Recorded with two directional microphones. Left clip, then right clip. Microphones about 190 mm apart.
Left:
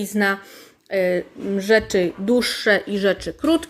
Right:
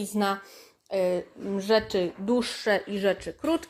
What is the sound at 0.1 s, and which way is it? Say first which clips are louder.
Speech: left 7 dB; 10° left (ahead or behind).